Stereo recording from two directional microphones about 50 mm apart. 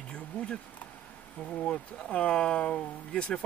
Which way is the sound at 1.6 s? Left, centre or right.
Left.